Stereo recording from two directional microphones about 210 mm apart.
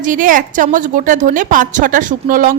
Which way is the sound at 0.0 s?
40° right (ahead or behind).